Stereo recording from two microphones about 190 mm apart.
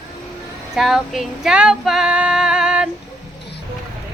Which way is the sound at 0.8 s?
Centre (ahead or behind).